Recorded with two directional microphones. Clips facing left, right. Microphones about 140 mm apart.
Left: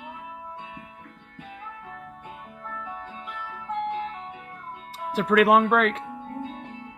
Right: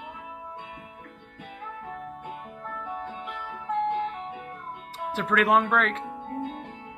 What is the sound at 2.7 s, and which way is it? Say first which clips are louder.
Music: right 3 dB; 5° right (ahead or behind).